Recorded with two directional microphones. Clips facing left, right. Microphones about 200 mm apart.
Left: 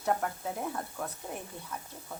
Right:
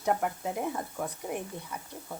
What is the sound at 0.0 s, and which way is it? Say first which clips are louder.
Speech: right 2 dB; 10° right (ahead or behind).